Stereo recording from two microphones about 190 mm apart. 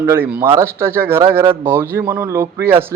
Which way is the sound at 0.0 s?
10° right (ahead or behind).